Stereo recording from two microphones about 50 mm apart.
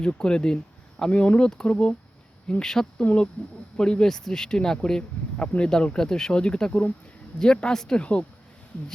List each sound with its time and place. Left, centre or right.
0.0 s speech: centre
2.6 s speech: centre
3.0 s speech: left